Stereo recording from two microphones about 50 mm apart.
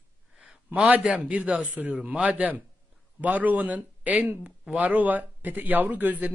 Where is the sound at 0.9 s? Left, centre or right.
Right.